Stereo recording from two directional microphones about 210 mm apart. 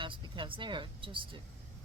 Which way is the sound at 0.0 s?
25° right (ahead or behind).